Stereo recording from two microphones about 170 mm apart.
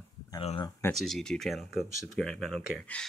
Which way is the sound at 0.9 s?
Centre (ahead or behind).